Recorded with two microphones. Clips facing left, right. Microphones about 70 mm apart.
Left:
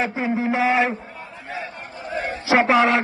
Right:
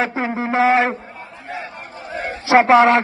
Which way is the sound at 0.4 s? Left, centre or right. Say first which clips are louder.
Right 5 dB; right.